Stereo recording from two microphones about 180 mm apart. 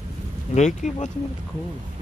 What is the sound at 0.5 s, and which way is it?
Speech, 40° left (ahead or behind).